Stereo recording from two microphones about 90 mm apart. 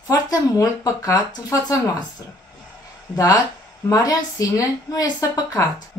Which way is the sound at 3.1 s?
40° left (ahead or behind).